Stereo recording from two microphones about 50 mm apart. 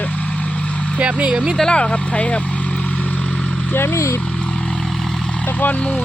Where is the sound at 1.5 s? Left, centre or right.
Centre.